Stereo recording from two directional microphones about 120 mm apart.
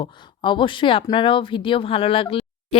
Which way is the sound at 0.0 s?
45° left (ahead or behind).